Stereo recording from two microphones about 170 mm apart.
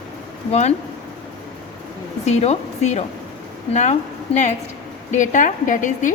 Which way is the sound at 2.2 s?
40° left (ahead or behind).